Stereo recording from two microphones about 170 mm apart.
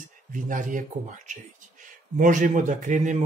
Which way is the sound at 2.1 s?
50° right (ahead or behind).